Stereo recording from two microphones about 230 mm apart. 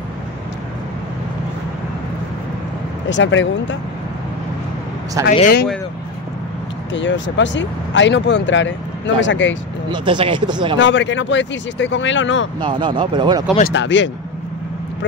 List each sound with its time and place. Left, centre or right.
3.1 s speech: left
5.3 s speech: left
6.9 s speech: left
9.8 s speech: right
10.8 s speech: left
12.5 s speech: centre
13.7 s speech: left